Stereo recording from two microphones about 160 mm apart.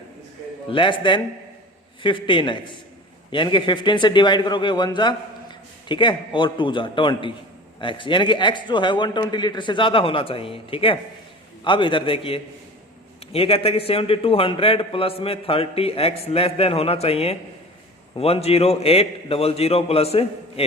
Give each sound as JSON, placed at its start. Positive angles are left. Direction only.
{"t": 0.7, "sound": "a man's voice", "side_deg": 30}